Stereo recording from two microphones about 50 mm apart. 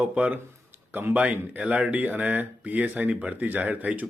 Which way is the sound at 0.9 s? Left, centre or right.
Right.